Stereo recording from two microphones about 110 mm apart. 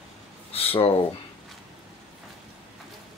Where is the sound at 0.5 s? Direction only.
60° left (ahead or behind).